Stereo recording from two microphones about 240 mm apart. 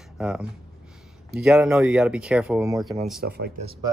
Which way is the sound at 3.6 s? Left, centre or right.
Right.